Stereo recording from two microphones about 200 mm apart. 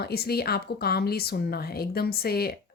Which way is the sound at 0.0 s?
50° left (ahead or behind).